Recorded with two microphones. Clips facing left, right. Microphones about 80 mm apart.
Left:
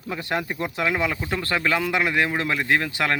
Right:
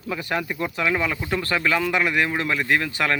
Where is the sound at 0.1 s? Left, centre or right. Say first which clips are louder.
Right 1 dB; left.